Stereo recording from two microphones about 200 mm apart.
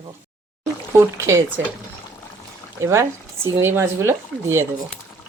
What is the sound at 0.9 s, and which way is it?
Speech, 15° right (ahead or behind).